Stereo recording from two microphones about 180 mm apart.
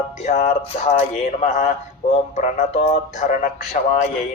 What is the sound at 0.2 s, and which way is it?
A man's voice, 40° left (ahead or behind).